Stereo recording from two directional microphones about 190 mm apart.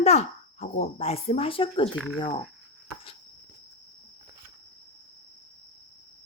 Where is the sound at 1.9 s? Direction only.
5° left (ahead or behind).